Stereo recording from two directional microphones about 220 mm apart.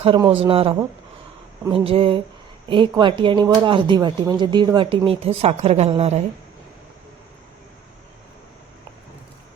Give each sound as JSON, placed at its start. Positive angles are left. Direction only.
{"t": 0.0, "sound": "speech", "side_deg": -25}